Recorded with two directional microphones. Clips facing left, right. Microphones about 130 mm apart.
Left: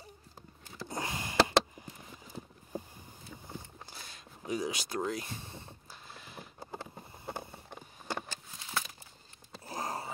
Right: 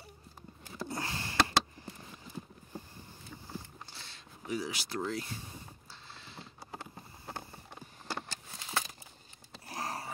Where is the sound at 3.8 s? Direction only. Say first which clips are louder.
Left 2 dB; 15° left (ahead or behind).